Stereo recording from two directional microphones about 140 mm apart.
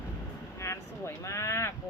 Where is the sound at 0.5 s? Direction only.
20° left (ahead or behind).